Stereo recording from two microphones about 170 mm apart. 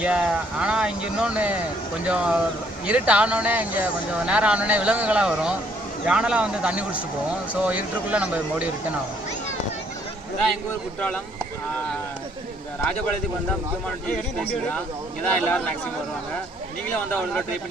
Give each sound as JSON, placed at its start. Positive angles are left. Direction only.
{"t": 0.0, "sound": "speech", "side_deg": -5}
{"t": 15.2, "sound": "a man's voice", "side_deg": 5}